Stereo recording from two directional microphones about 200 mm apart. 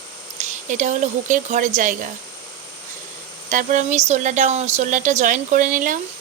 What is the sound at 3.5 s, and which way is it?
Speech, 40° right (ahead or behind).